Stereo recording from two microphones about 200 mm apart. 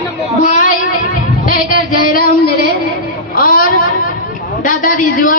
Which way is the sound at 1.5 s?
45° left (ahead or behind).